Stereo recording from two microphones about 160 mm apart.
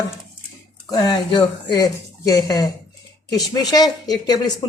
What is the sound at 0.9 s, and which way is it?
Speech, 25° left (ahead or behind).